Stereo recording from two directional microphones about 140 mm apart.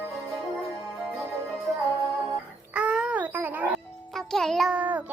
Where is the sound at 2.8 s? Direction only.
5° right (ahead or behind).